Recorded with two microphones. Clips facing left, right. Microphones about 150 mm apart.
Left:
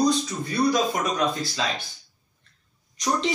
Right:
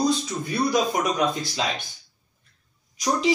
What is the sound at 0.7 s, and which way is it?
Speech, 20° right (ahead or behind).